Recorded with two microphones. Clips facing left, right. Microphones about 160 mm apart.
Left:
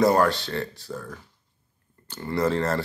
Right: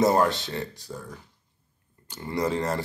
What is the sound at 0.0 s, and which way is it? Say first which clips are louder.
Speech: left 1 dB; 20° right (ahead or behind).